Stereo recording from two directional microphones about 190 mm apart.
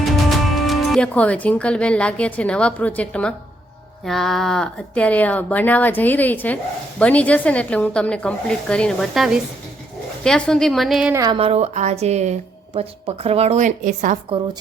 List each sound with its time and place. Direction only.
0.0 s a woman's voice: centre (ahead or behind)
11.1 s speech: 20° right (ahead or behind)
11.3 s speech: 30° right (ahead or behind)